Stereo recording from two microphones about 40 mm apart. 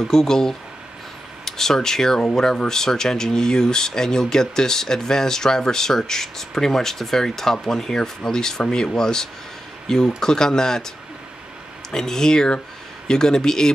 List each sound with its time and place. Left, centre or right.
0.1 s speech: centre
11.9 s speech: centre